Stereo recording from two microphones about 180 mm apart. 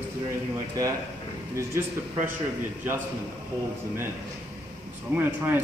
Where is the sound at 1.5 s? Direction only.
15° right (ahead or behind).